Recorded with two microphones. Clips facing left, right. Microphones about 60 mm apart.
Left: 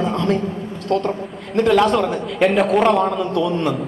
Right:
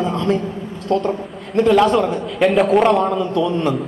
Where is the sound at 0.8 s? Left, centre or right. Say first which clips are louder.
Right 1 dB; left.